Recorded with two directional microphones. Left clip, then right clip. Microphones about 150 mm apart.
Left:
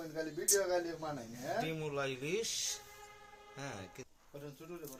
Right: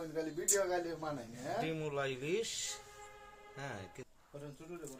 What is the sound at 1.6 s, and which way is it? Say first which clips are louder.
Speech: right 1 dB; 20° right (ahead or behind).